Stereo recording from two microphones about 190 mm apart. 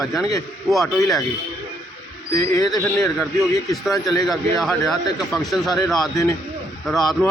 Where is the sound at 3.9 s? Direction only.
20° left (ahead or behind).